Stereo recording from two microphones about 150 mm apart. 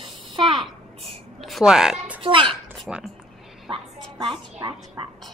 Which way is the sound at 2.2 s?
35° right (ahead or behind).